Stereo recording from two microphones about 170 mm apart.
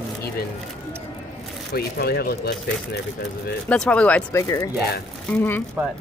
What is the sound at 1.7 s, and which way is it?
Speech, 65° left (ahead or behind).